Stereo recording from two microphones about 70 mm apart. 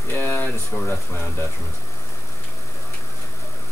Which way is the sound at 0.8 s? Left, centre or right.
Left.